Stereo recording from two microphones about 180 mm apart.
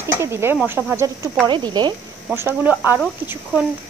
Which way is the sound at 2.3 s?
10° right (ahead or behind).